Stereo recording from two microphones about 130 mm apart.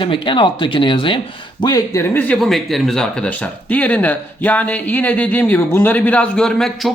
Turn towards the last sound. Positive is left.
turn(degrees=5)  # may be behind; listen again after turning